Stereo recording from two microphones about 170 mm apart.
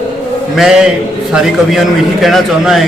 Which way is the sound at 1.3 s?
Centre (ahead or behind).